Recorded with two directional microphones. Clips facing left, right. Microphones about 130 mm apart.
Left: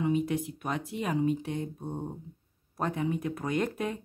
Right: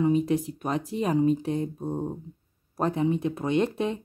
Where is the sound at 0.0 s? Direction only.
35° right (ahead or behind).